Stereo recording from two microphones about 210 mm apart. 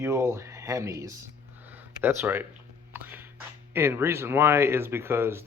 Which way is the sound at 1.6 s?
10° right (ahead or behind).